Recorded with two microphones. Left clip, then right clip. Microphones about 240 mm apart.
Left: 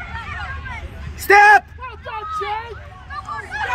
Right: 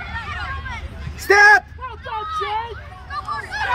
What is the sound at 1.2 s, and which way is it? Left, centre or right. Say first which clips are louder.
Speech: left 1 dB; left.